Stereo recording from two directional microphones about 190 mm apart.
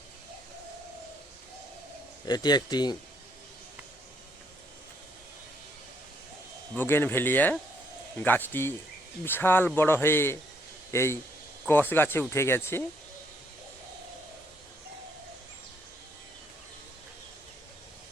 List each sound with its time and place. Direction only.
2.2 s a man's voice: 20° left (ahead or behind)
6.7 s speech: 10° left (ahead or behind)